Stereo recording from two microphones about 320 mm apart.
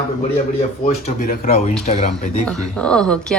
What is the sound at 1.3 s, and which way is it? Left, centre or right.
Speech, left.